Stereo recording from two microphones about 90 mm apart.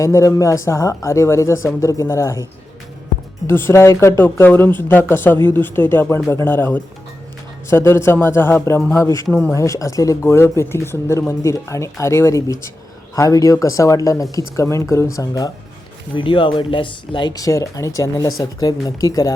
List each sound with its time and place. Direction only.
0.0 s speech: 35° left (ahead or behind)
3.4 s speech: 25° left (ahead or behind)
16.1 s speech: 70° left (ahead or behind)
17.3 s speech: 40° left (ahead or behind)